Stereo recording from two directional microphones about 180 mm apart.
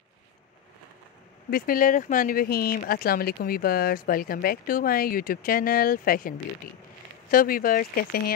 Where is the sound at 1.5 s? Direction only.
50° left (ahead or behind).